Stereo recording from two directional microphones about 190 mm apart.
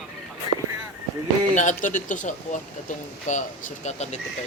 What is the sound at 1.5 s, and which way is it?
Speech, 40° left (ahead or behind).